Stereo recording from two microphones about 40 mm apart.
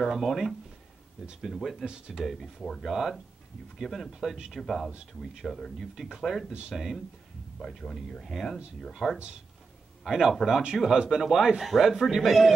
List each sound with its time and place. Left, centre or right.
0.1 s speech: centre
1.9 s speech: centre
2.2 s speech: centre
4.1 s speech: centre
5.9 s speech: centre
7.5 s speech: centre
8.3 s speech: centre
10.0 s speech: centre
12.2 s speech: centre